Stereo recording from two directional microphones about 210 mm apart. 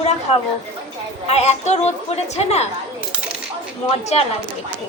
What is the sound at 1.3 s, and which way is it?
A woman's voice, 30° left (ahead or behind).